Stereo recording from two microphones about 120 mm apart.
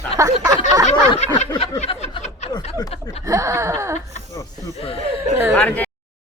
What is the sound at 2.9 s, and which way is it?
Speech, 60° left (ahead or behind).